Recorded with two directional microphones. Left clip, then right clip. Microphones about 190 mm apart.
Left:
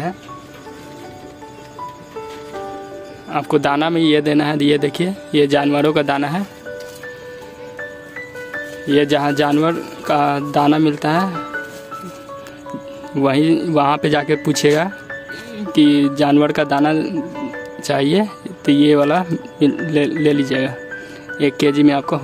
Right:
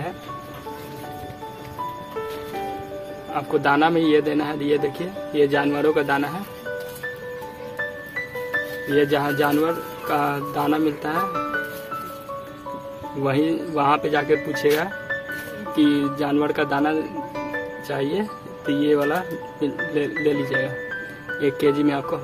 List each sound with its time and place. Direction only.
3.3 s a man's voice: 60° left (ahead or behind)
8.9 s a man's voice: 60° left (ahead or behind)
13.2 s a man's voice: 60° left (ahead or behind)